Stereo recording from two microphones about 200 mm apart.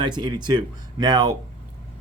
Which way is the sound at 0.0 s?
20° right (ahead or behind).